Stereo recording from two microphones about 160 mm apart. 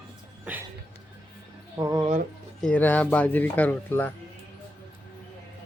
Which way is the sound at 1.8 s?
25° right (ahead or behind).